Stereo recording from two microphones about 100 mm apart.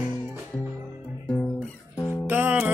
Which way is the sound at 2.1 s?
20° right (ahead or behind).